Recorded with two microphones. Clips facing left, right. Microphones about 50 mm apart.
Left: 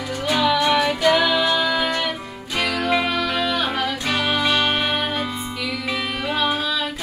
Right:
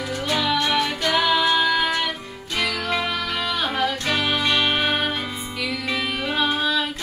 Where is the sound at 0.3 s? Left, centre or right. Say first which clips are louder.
Left 4 dB; centre.